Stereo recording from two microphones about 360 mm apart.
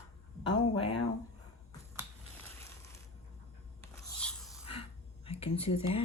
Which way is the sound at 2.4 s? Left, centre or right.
Centre.